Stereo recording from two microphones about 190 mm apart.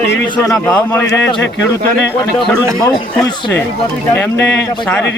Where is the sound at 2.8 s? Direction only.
10° left (ahead or behind).